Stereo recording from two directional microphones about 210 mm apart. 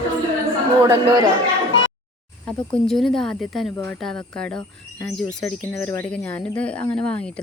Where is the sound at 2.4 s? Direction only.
5° left (ahead or behind).